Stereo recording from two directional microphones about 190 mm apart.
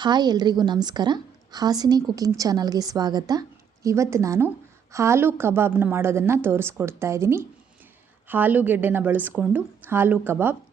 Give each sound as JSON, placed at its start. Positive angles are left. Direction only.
{"t": 0.0, "sound": "a woman's voice", "side_deg": -20}